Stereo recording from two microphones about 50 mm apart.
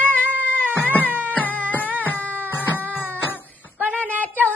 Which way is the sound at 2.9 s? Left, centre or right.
Left.